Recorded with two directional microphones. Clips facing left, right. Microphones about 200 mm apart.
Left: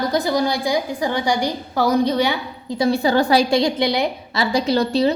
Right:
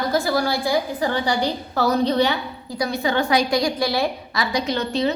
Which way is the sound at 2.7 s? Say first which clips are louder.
Left 5 dB; 30° left (ahead or behind).